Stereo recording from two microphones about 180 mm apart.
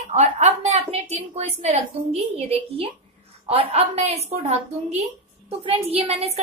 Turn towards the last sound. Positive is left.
turn(degrees=-35)  # may be behind; listen again after turning